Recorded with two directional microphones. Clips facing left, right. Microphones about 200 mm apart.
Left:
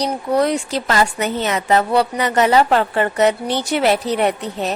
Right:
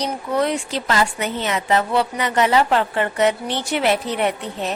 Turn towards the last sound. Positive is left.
turn(degrees=40)  # may be behind; listen again after turning